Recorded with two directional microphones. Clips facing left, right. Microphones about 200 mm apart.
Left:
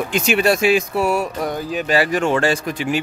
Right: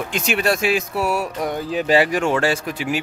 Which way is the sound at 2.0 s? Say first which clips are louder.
Left 1 dB; 10° right (ahead or behind).